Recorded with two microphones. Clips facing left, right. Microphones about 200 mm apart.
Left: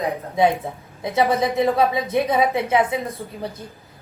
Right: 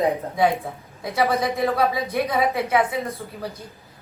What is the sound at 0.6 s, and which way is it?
A woman's voice, 25° left (ahead or behind).